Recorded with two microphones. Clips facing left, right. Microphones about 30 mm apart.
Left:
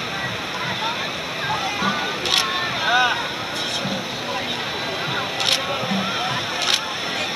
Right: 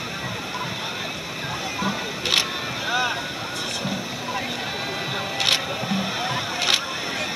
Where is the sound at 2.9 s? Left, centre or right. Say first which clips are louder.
Left 6 dB; left.